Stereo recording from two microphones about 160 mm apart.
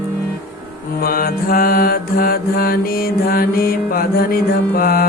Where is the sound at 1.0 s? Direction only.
65° left (ahead or behind).